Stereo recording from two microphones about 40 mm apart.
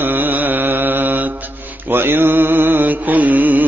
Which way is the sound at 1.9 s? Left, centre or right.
Right.